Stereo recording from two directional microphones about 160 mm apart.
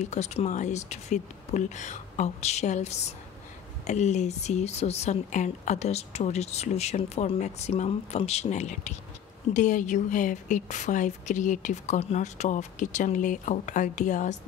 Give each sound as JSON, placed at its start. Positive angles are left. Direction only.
{"t": 0.0, "sound": "a woman's voice", "side_deg": 45}